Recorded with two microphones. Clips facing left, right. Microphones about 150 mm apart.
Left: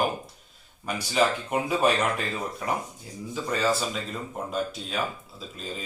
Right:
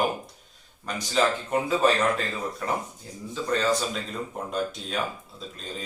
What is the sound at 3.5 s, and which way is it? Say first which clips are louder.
Speech: right 1 dB; 5° left (ahead or behind).